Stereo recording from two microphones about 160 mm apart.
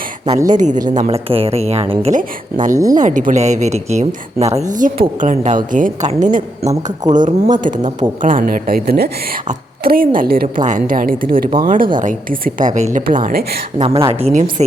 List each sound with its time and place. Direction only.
0.4 s a woman's voice: 50° right (ahead or behind)
1.0 s a woman's voice: 35° right (ahead or behind)
2.1 s a woman's voice: 55° right (ahead or behind)
13.1 s speech: 60° right (ahead or behind)
13.7 s a woman's voice: 35° right (ahead or behind)